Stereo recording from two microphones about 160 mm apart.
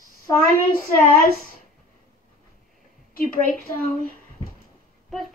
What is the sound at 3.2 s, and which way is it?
Speech, 60° left (ahead or behind).